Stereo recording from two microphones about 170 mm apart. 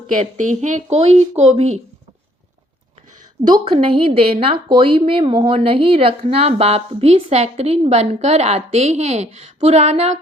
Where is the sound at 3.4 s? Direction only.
30° right (ahead or behind).